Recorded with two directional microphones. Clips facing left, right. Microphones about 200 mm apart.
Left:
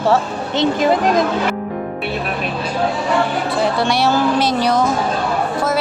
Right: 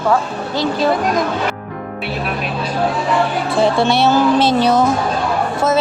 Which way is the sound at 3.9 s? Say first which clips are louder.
Right 3 dB; 25° right (ahead or behind).